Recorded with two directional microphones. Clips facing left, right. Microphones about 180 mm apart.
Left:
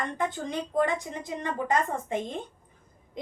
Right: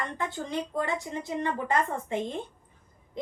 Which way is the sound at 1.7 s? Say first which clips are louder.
Left 4 dB; 20° left (ahead or behind).